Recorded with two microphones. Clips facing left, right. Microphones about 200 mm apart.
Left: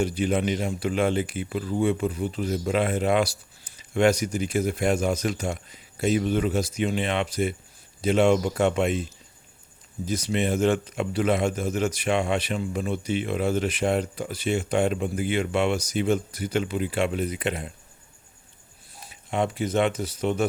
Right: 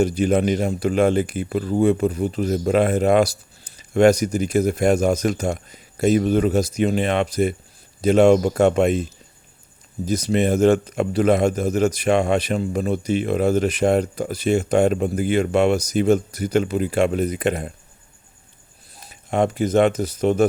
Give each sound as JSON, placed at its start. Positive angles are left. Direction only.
{"t": 0.0, "sound": "speech", "side_deg": -40}
{"t": 10.1, "sound": "speech", "side_deg": -40}
{"t": 18.9, "sound": "speech", "side_deg": -40}